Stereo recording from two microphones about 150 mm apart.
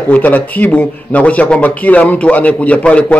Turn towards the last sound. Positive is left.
turn(degrees=10)  # may be behind; listen again after turning